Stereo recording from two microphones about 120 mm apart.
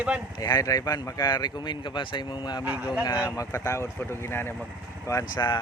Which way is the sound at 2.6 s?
10° right (ahead or behind).